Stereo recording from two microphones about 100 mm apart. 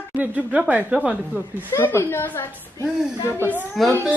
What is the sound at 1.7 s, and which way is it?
Speech, 25° left (ahead or behind).